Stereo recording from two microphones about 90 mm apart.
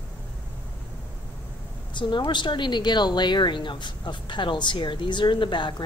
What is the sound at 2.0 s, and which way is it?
Speech, 60° left (ahead or behind).